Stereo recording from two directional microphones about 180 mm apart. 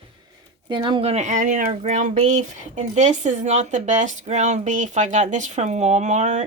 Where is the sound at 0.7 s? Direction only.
30° right (ahead or behind).